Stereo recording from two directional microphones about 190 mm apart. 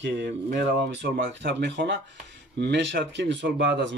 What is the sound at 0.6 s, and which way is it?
Speech, 65° right (ahead or behind).